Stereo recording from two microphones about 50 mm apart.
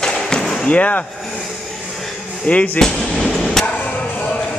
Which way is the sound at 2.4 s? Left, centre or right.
Left.